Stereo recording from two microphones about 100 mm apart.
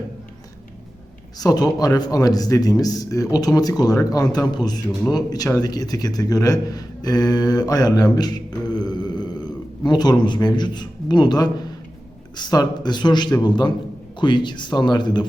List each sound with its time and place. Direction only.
1.4 s a man's voice: 40° left (ahead or behind)